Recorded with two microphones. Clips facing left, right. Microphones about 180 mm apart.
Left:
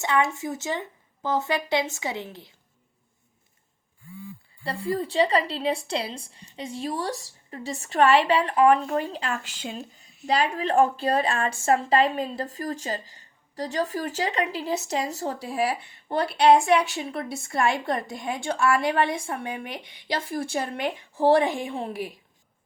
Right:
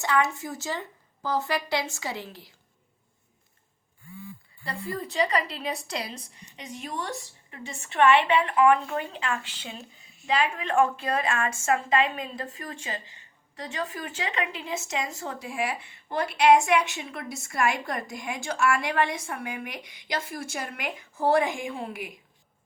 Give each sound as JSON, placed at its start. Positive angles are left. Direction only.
{"t": 0.0, "sound": "speech", "side_deg": 20}
{"t": 4.6, "sound": "a woman's voice", "side_deg": 30}